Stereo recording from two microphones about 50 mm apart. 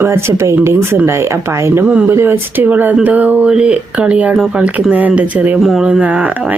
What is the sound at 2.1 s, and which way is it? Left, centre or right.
Speech, right.